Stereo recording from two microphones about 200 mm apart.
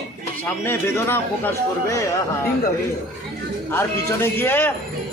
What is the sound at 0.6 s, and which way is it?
Speech, 10° left (ahead or behind).